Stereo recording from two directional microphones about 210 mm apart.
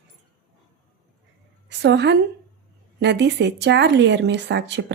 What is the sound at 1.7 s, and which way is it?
A woman's voice, 55° right (ahead or behind).